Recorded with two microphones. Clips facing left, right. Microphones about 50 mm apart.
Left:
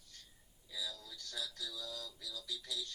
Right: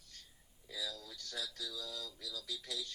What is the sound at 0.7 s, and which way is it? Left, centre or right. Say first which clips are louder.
Speech: right 1 dB; right.